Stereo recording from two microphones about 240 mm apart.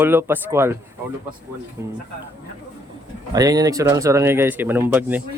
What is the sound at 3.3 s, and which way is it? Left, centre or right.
Speech, centre.